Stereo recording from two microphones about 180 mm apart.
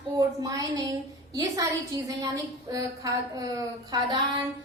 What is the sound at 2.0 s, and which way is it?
A woman's voice, 20° right (ahead or behind).